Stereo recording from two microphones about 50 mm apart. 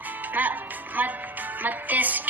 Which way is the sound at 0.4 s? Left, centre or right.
Right.